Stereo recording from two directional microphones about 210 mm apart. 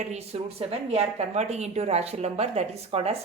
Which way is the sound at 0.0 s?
30° right (ahead or behind).